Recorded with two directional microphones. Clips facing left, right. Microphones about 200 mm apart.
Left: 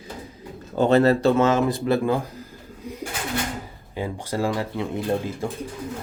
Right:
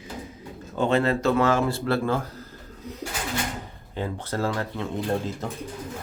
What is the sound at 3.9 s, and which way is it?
Speech, 10° left (ahead or behind).